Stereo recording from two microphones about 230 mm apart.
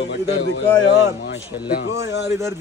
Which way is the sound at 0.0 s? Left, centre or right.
Left.